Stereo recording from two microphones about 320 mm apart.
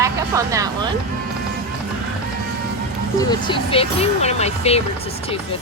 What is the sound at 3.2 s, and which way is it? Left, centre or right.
Speech, centre.